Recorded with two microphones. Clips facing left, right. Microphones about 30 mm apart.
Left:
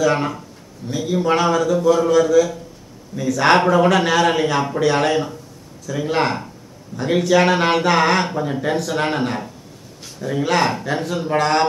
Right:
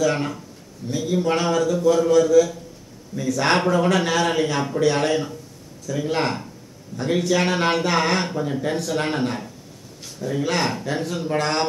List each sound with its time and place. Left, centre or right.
0.0 s speech: centre